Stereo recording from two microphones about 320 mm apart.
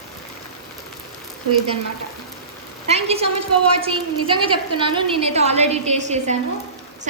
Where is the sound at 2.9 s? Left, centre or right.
Centre.